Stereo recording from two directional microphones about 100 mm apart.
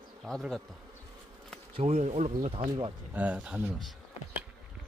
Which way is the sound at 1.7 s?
80° right.